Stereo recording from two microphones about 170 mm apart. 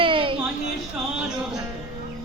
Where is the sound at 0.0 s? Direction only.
30° right (ahead or behind).